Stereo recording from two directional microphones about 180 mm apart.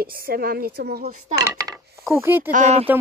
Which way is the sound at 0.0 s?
55° right (ahead or behind).